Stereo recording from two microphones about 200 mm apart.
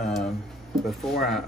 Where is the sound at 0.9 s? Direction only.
Centre (ahead or behind).